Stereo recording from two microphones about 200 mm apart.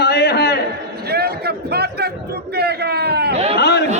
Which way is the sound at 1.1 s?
50° right (ahead or behind).